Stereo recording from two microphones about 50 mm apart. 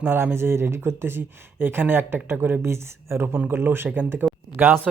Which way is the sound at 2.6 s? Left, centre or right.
Right.